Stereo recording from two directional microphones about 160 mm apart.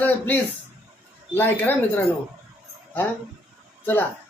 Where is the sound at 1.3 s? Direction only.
10° left (ahead or behind).